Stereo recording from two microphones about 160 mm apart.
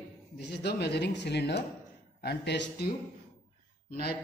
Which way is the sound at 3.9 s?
75° left (ahead or behind).